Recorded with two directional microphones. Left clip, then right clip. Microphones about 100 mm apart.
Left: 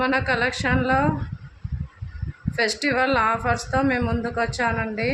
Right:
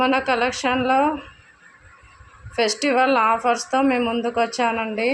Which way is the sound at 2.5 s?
40° right (ahead or behind).